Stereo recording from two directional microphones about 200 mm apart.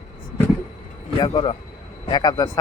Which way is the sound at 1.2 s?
25° left (ahead or behind).